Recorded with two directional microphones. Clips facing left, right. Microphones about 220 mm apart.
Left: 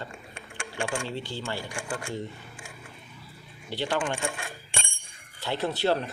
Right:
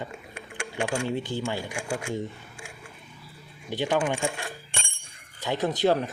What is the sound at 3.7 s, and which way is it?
Speech, 15° right (ahead or behind).